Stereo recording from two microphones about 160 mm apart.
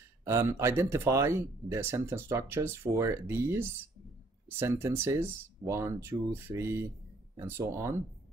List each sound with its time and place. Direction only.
0.2 s speech: 15° right (ahead or behind)